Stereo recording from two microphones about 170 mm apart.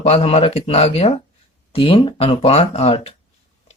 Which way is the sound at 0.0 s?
40° left (ahead or behind).